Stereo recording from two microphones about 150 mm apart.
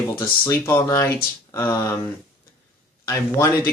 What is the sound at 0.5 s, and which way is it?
Speech, 15° left (ahead or behind).